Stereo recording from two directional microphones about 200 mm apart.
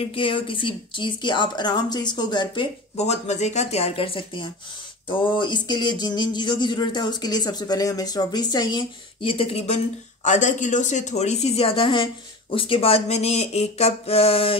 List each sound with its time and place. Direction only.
0.0 s speech: 25° left (ahead or behind)